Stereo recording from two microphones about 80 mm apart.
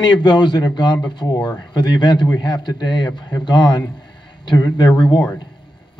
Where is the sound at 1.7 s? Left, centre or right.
Left.